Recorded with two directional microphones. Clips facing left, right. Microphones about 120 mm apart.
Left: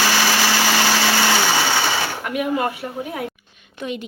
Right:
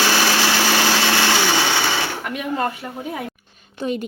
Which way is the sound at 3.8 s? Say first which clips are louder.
Right 4 dB; 35° right (ahead or behind).